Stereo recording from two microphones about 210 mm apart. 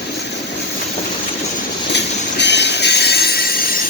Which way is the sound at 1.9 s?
55° left (ahead or behind).